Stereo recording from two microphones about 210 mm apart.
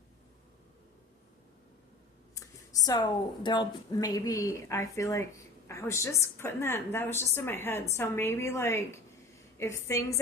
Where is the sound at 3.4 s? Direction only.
20° left (ahead or behind).